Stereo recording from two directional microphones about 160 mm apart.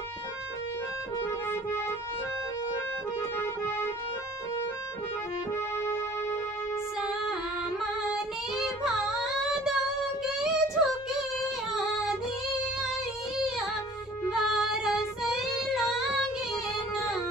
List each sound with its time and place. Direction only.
1.2 s music: 15° left (ahead or behind)
7.8 s female singing: centre (ahead or behind)
10.3 s child singing: 5° right (ahead or behind)
14.3 s female singing: centre (ahead or behind)